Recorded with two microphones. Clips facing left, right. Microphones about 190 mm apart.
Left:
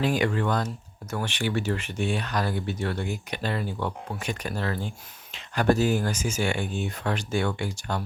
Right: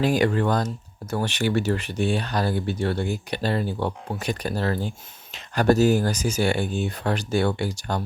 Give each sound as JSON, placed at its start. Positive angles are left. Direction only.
{"t": 0.0, "sound": "speech", "side_deg": -40}